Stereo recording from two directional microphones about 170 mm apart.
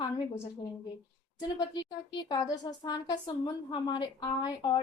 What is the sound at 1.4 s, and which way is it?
A woman's voice, 25° left (ahead or behind).